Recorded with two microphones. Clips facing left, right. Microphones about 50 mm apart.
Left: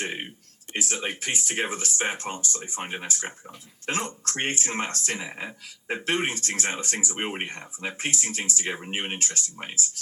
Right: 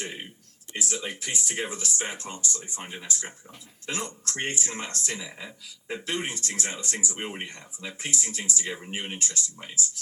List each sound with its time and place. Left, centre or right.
0.0 s speech: left